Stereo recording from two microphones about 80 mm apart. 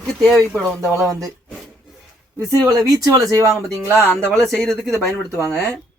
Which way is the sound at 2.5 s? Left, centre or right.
Right.